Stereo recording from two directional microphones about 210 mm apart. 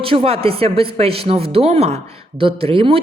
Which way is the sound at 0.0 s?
25° right (ahead or behind).